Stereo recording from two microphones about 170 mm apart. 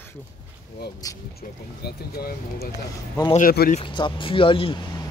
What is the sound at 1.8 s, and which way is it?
Speech, 65° left (ahead or behind).